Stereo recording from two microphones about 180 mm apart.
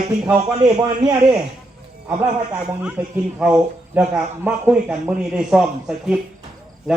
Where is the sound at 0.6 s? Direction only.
25° right (ahead or behind).